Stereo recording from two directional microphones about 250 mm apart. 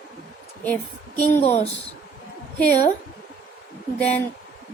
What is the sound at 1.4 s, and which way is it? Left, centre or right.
Speech, left.